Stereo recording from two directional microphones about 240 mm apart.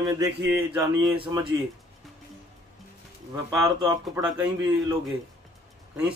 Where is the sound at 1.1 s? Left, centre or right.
Right.